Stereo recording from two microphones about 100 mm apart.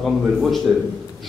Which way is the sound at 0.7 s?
15° right (ahead or behind).